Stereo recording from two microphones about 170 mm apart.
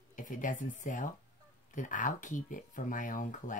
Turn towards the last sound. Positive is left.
turn(degrees=50)  # may be behind; listen again after turning